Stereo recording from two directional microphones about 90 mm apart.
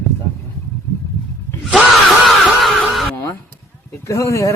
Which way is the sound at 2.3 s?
Centre (ahead or behind).